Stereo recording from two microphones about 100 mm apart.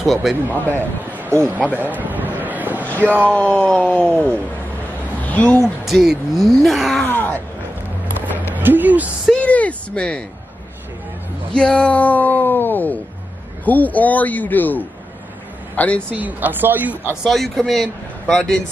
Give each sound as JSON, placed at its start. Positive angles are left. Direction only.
{"t": 0.0, "sound": "a man's voice", "side_deg": 0}
{"t": 0.7, "sound": "speech", "side_deg": -25}
{"t": 2.0, "sound": "a sound", "side_deg": -15}
{"t": 3.0, "sound": "speech", "side_deg": -20}
{"t": 3.3, "sound": "speech", "side_deg": 10}
{"t": 5.9, "sound": "a man's voice", "side_deg": 0}
{"t": 7.1, "sound": "groan", "side_deg": 20}
{"t": 8.5, "sound": "speech", "side_deg": -20}
{"t": 9.4, "sound": "speech", "side_deg": 15}
{"t": 11.5, "sound": "a man's voice", "side_deg": 10}
{"t": 16.1, "sound": "speech", "side_deg": -15}
{"t": 17.2, "sound": "a man's voice", "side_deg": 0}